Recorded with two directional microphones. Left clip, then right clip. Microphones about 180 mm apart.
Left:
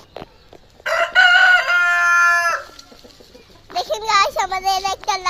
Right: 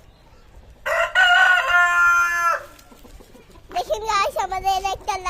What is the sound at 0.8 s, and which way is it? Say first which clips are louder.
Chicken: left 3 dB; 45° right (ahead or behind).